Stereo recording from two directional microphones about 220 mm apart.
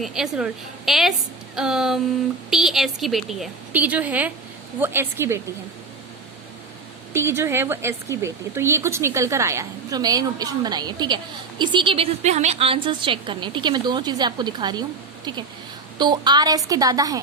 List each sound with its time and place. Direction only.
0.0 s a woman's voice: centre (ahead or behind)
7.1 s a woman's voice: 10° right (ahead or behind)